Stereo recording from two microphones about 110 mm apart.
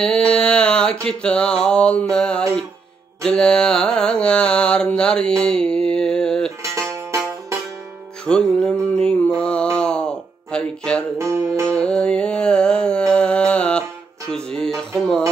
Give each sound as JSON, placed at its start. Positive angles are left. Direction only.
{"t": 0.0, "sound": "a sound", "side_deg": 5}
{"t": 1.0, "sound": "mantra", "side_deg": 10}
{"t": 6.7, "sound": "music", "side_deg": -25}
{"t": 8.3, "sound": "a sound", "side_deg": 5}
{"t": 11.1, "sound": "music", "side_deg": -25}
{"t": 11.7, "sound": "music", "side_deg": 10}